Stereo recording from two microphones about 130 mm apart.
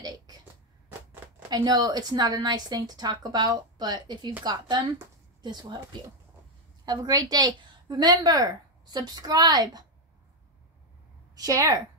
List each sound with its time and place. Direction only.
1.5 s a woman's voice: 30° right (ahead or behind)
11.3 s a woman's voice: 25° right (ahead or behind)